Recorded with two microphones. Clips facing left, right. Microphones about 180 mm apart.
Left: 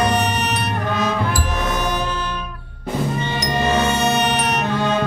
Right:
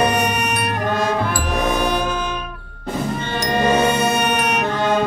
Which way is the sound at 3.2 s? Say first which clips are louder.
Right 1 dB; 55° right (ahead or behind).